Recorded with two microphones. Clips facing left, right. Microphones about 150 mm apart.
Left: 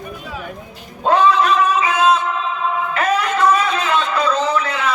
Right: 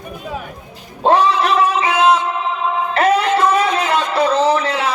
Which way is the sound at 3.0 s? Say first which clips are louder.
Right 5 dB; 30° right (ahead or behind).